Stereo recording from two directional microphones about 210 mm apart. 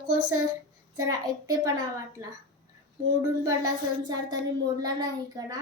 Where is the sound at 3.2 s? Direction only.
15° right (ahead or behind).